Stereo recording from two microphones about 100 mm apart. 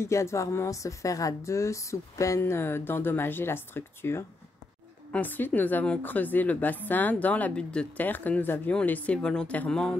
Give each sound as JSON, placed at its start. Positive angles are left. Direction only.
{"t": 0.0, "sound": "a woman's voice", "side_deg": 30}